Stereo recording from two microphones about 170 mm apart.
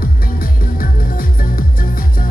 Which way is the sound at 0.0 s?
55° left (ahead or behind).